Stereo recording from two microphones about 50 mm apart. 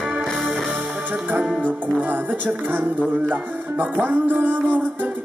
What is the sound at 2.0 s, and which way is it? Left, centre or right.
Music, right.